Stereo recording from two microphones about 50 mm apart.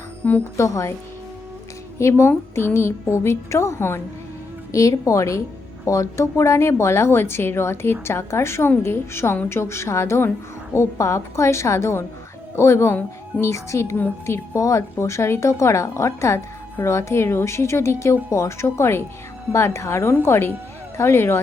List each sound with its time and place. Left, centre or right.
0.5 s a woman's voice: left
2.0 s a woman's voice: left
4.7 s a woman's voice: left
10.8 s a woman's voice: left
16.8 s a woman's voice: left
20.2 s a woman's voice: left